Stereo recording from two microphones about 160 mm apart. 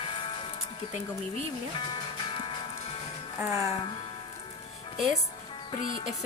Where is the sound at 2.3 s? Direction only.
30° left (ahead or behind).